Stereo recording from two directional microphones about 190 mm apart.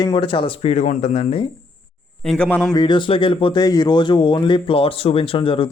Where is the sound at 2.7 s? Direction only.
25° left (ahead or behind).